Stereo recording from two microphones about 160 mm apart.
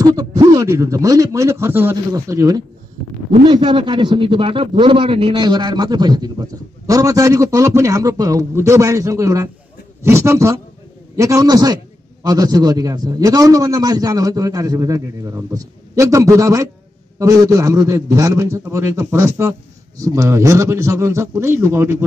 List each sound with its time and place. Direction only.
0.0 s a man's voice: 20° right (ahead or behind)